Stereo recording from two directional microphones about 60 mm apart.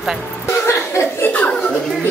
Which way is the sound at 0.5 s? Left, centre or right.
Left.